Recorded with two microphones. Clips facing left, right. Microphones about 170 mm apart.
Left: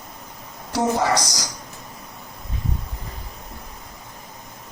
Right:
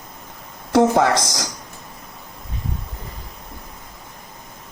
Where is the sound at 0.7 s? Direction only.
60° right (ahead or behind).